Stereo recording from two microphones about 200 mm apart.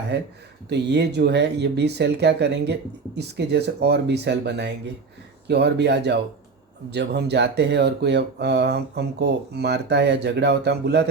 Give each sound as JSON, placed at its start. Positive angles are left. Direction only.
{"t": 0.1, "sound": "speech", "side_deg": -60}